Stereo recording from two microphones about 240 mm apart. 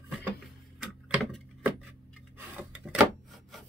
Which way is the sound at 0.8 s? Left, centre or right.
Centre.